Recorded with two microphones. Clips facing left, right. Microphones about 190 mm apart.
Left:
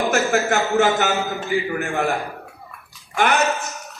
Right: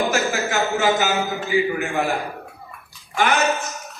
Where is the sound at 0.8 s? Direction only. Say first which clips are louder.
Left 2 dB; 55° left (ahead or behind).